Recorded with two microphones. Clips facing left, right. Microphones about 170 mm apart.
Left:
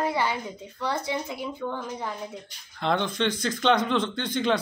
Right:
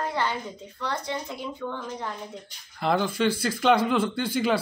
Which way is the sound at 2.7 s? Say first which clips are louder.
Right 1 dB; 5° right (ahead or behind).